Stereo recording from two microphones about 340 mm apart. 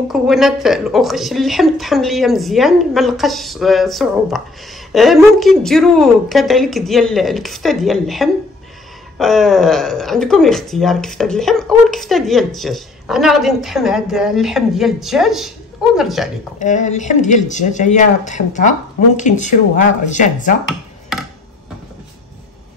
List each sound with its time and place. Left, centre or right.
0.1 s speech: centre
16.5 s speech: left